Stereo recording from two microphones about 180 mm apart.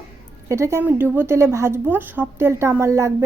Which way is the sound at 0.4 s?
15° right (ahead or behind).